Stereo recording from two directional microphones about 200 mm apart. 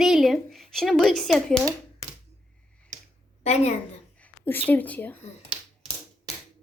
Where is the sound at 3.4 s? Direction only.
35° left (ahead or behind).